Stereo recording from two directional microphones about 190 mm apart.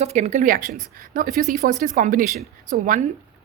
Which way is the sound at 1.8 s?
45° right (ahead or behind).